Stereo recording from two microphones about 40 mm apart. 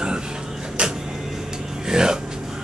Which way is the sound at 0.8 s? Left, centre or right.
Right.